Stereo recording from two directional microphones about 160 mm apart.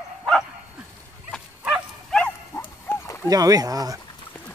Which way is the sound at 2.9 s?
15° left (ahead or behind).